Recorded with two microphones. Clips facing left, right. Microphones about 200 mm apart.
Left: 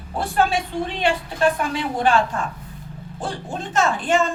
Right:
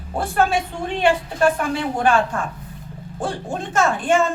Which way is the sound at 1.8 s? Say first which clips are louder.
Right 1 dB; 50° right (ahead or behind).